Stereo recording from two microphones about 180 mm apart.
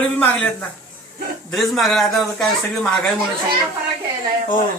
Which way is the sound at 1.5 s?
Centre (ahead or behind).